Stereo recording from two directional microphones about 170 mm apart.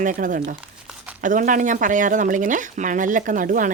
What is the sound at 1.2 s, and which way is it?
Speech, 50° right (ahead or behind).